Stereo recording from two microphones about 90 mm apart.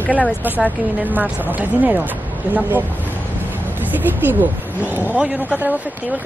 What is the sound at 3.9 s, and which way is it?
Speech, 20° right (ahead or behind).